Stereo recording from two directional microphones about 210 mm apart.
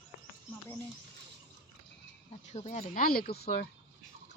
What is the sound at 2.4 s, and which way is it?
Speech, 35° left (ahead or behind).